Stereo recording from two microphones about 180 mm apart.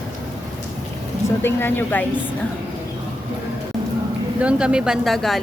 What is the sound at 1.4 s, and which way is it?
Speech, 10° left (ahead or behind).